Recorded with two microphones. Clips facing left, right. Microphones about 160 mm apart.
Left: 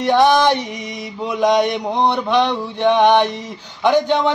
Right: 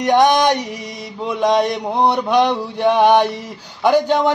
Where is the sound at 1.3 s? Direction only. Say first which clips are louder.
Left 1 dB; centre (ahead or behind).